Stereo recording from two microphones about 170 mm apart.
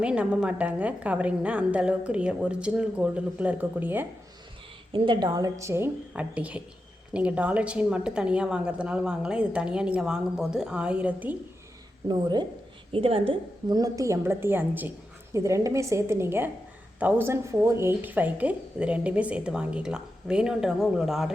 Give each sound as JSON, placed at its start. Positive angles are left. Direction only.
{"t": 0.0, "sound": "speech", "side_deg": -5}
{"t": 4.9, "sound": "a woman's voice", "side_deg": -30}
{"t": 12.0, "sound": "a woman's voice", "side_deg": -25}